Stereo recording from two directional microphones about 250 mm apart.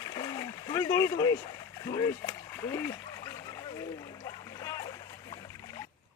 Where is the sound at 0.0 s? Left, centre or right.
Centre.